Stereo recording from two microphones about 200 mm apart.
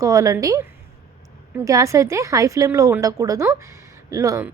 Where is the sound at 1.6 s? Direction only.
15° right (ahead or behind).